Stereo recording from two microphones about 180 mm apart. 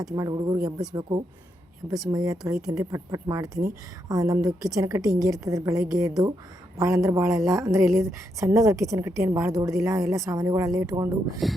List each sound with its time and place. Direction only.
0.0 s a woman's voice: 20° right (ahead or behind)
2.0 s a woman's voice: 20° right (ahead or behind)